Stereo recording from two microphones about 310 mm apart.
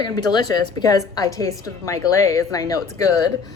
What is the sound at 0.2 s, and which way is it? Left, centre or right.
A woman's voice, centre.